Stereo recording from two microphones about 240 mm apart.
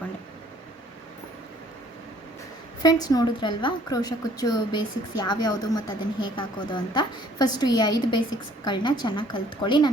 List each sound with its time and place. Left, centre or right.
2.8 s a woman's voice: centre